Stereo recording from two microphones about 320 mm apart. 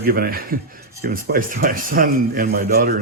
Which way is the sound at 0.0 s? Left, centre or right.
Right.